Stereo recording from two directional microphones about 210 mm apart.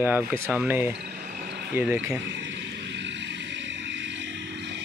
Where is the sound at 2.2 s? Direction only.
60° right (ahead or behind).